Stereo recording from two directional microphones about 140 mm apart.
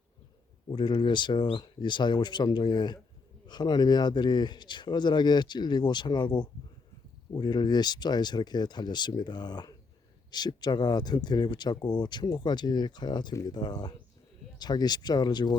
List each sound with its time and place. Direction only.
0.7 s speech: 35° left (ahead or behind)